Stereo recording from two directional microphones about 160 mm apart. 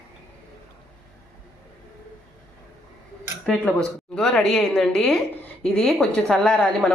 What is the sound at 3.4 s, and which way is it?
Speech, 5° left (ahead or behind).